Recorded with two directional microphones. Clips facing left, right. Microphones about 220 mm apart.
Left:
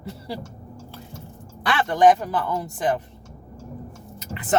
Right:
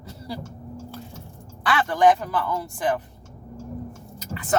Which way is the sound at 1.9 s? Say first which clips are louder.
Left 2 dB; 20° left (ahead or behind).